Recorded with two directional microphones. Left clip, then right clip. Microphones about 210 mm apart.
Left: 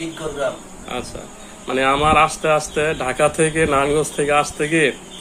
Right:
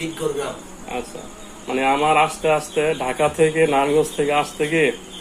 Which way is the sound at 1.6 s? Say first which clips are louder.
Left 2 dB; 30° left (ahead or behind).